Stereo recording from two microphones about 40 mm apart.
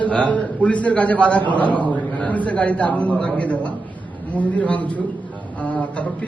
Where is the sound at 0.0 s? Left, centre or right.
Left.